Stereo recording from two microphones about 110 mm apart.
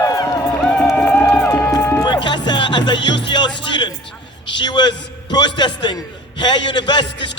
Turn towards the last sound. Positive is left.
turn(degrees=45)  # may be behind; listen again after turning